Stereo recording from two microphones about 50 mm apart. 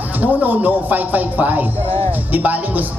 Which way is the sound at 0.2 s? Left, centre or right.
Right.